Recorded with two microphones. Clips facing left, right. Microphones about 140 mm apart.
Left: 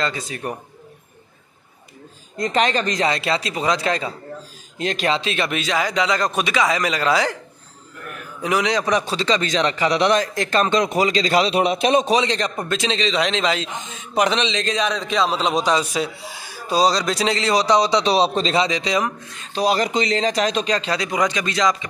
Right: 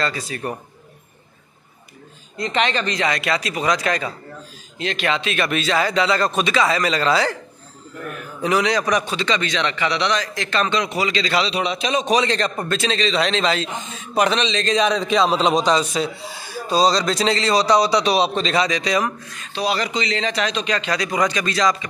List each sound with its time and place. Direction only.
0.0 s a man's voice: 20° left (ahead or behind)
2.3 s speech: 40° left (ahead or behind)
3.1 s speech: 25° left (ahead or behind)
4.7 s speech: 40° left (ahead or behind)
5.5 s a man's voice: 15° left (ahead or behind)
8.4 s a man's voice: 10° left (ahead or behind); by 12.1 s 50° left (ahead or behind)
12.1 s a man's voice: 20° left (ahead or behind)
14.7 s a man's voice: centre (ahead or behind); by 19.5 s 20° left (ahead or behind)
19.5 s speech: 45° left (ahead or behind); by 21.8 s 20° left (ahead or behind)